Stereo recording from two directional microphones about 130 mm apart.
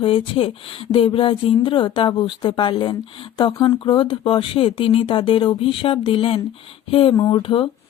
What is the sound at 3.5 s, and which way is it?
Speech, 25° left (ahead or behind).